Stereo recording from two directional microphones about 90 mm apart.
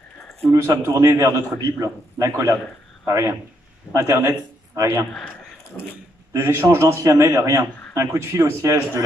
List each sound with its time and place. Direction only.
0.7 s a man's voice: 30° right (ahead or behind)
5.7 s speech: 15° left (ahead or behind)
6.3 s a man's voice: 30° right (ahead or behind)